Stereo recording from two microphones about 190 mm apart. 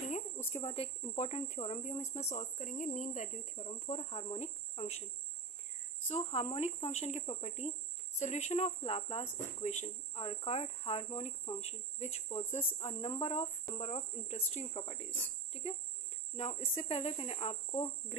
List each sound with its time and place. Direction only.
0.5 s speech: 30° left (ahead or behind)
6.0 s speech: 35° left (ahead or behind)
16.3 s speech: 35° left (ahead or behind)